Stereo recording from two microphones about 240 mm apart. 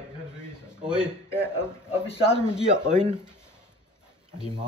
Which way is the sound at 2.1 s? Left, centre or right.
Left.